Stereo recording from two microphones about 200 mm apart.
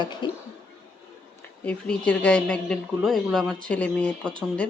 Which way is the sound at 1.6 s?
5° left (ahead or behind).